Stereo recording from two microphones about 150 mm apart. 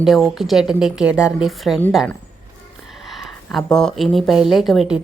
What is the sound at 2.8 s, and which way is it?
Speech, centre (ahead or behind).